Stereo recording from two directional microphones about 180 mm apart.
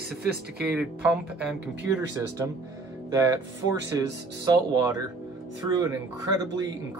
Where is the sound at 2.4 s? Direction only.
15° right (ahead or behind).